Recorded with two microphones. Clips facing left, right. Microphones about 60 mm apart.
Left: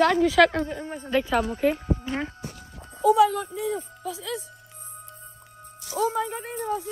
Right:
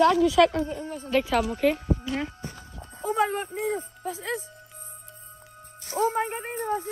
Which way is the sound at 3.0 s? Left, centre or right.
Right.